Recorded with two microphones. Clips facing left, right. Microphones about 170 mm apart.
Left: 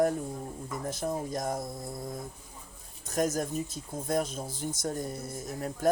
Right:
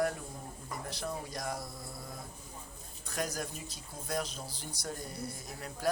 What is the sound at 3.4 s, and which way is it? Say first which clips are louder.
Speech: left 9 dB; 50° left (ahead or behind).